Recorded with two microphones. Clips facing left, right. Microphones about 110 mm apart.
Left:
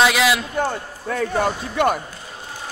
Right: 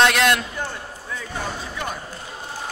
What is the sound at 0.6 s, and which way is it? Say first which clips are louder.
Speech: left 7 dB; 60° left (ahead or behind).